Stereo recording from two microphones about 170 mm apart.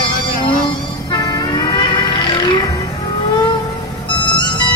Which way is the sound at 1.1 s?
25° left (ahead or behind).